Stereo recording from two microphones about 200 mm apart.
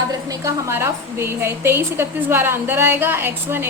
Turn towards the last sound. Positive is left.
turn(degrees=-10)  # may be behind; listen again after turning